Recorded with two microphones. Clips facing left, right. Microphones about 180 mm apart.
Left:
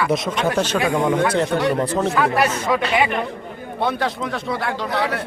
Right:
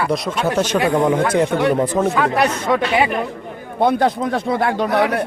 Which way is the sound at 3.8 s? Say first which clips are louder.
Right 6 dB; 50° right (ahead or behind).